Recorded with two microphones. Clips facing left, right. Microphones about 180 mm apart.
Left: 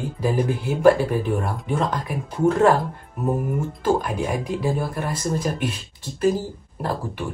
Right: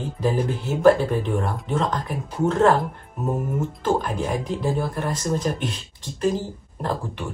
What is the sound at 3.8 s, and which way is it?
Speech, 10° left (ahead or behind).